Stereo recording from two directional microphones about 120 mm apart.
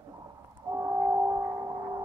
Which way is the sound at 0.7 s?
25° right (ahead or behind).